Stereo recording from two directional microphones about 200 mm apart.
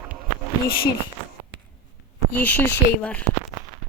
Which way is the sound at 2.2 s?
10° left (ahead or behind).